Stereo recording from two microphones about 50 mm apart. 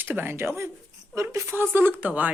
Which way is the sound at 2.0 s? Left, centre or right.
Right.